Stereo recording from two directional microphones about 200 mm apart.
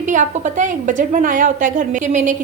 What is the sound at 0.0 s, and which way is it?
A woman's voice, 40° right (ahead or behind).